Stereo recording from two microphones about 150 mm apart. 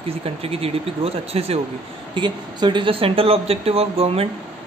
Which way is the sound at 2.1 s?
30° right (ahead or behind).